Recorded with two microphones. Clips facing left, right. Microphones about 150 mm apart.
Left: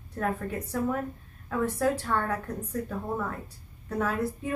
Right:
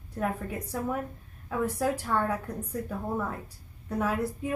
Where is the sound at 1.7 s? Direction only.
10° right (ahead or behind).